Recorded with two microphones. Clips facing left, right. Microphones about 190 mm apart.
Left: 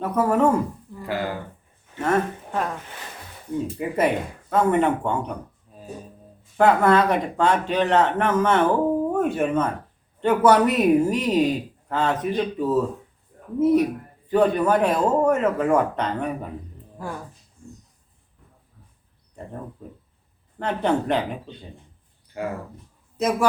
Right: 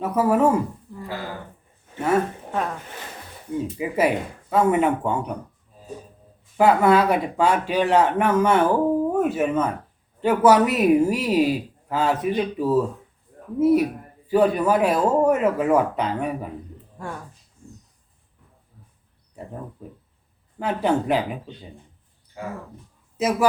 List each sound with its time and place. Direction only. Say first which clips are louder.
0.0 s speech: right 1 dB; 5° right (ahead or behind)
1.0 s speech: left 5 dB; 65° left (ahead or behind)
2.0 s speech: right 1 dB; 5° right (ahead or behind)
3.8 s speech: right 1 dB; 5° right (ahead or behind)
6.6 s speech: right 1 dB; 5° right (ahead or behind)
19.4 s speech: right 1 dB; 5° right (ahead or behind)
20.6 s speech: right 1 dB; 5° right (ahead or behind)
23.1 s a man's voice: right 1 dB; 5° right (ahead or behind)